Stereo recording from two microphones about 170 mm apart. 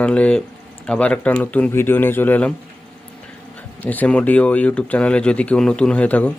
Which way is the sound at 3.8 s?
10° left (ahead or behind).